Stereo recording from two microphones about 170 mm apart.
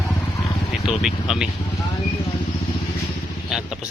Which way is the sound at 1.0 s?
Centre (ahead or behind).